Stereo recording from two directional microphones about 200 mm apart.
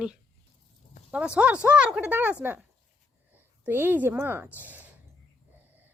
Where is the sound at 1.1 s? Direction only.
5° right (ahead or behind).